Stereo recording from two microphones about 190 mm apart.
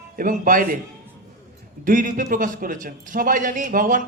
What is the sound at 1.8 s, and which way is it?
A man's voice, 45° right (ahead or behind).